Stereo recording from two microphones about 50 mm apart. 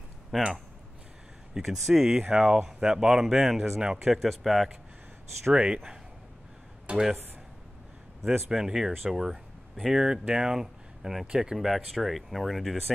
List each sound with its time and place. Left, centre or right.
0.3 s speech: centre
1.5 s speech: centre
5.5 s speech: centre
6.9 s speech: centre
8.5 s speech: centre
11.5 s speech: centre